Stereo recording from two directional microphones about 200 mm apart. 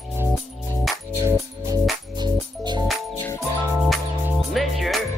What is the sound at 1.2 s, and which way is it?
Music, 15° right (ahead or behind).